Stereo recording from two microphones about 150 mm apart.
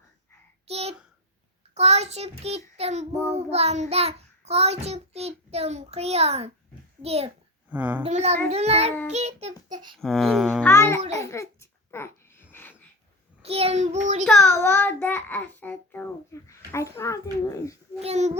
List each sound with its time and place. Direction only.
0.7 s a sound: 45° right (ahead or behind)
1.7 s a child's voice: 45° right (ahead or behind)
2.4 s child singing: 45° right (ahead or behind)
7.7 s a woman's voice: 10° right (ahead or behind)
8.0 s child singing: 45° right (ahead or behind)
9.6 s speech: 25° right (ahead or behind)
10.0 s speech: centre (ahead or behind)
10.6 s a child's voice: 15° left (ahead or behind)
11.2 s babbling: 20° left (ahead or behind)
13.4 s child singing: 40° right (ahead or behind)
14.3 s a child's voice: 15° left (ahead or behind)
18.0 s child singing: 50° right (ahead or behind)